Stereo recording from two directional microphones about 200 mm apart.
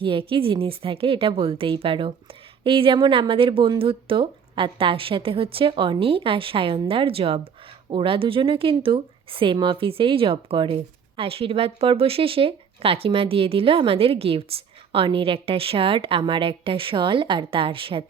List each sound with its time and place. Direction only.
0.0 s speech: 25° right (ahead or behind)